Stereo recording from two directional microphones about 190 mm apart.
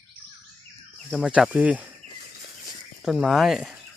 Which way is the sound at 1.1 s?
5° right (ahead or behind).